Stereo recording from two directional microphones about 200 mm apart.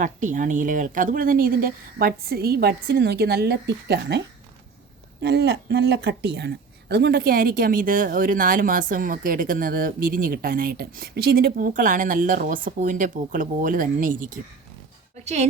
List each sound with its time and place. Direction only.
0.0 s speech: 40° right (ahead or behind); by 4.2 s 55° right (ahead or behind)
5.2 s a woman's voice: 55° right (ahead or behind); by 15.4 s 35° right (ahead or behind)